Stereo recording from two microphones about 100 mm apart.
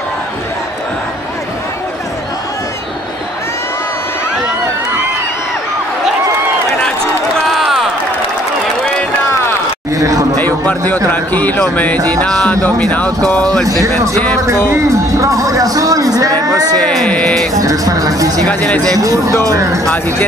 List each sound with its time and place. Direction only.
7.4 s a sound: centre (ahead or behind)
9.9 s a sound: 35° right (ahead or behind)
10.4 s a sound: 20° left (ahead or behind)
11.1 s speech: 15° left (ahead or behind)
13.7 s speech: 35° right (ahead or behind)
14.7 s music: 30° right (ahead or behind)
16.7 s speech: 5° left (ahead or behind)
17.6 s speech: 35° right (ahead or behind)
18.5 s speech: 15° left (ahead or behind)
18.9 s speech: 35° right (ahead or behind)